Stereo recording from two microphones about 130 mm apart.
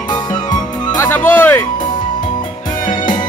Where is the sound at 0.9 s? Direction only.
20° left (ahead or behind).